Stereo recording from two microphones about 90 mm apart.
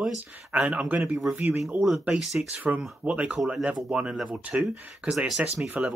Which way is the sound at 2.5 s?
15° right (ahead or behind).